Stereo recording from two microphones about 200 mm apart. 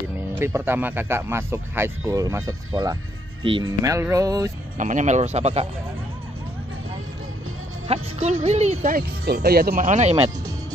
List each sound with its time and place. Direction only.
0.3 s speech: 10° right (ahead or behind)
4.7 s speech: 40° right (ahead or behind)
7.9 s speech: 35° right (ahead or behind)